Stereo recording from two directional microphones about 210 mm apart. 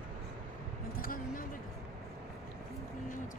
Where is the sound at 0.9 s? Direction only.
40° left (ahead or behind).